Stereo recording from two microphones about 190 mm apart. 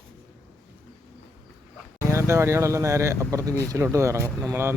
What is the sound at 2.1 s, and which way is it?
Speech, 15° right (ahead or behind).